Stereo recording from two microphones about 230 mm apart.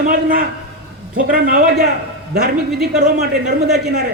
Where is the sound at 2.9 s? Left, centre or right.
Right.